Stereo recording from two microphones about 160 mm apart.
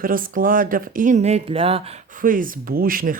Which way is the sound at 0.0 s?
60° right (ahead or behind).